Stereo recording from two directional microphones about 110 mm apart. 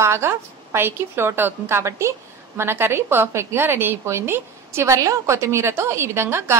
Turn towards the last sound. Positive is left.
turn(degrees=-25)  # may be behind; listen again after turning